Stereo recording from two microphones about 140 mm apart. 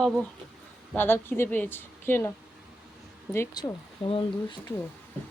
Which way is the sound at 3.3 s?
25° left (ahead or behind).